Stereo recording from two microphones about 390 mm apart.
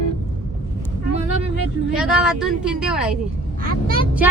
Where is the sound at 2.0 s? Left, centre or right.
Centre.